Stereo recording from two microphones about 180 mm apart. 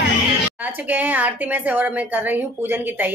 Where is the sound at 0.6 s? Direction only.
10° right (ahead or behind).